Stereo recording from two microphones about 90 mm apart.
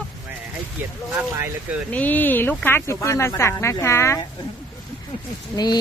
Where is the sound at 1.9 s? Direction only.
20° left (ahead or behind).